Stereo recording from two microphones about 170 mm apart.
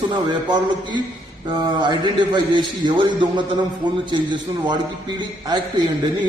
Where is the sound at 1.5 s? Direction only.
25° right (ahead or behind).